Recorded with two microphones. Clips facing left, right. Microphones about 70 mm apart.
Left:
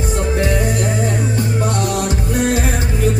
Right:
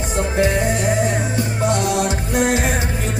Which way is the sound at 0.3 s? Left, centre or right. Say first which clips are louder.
Right 2 dB; right.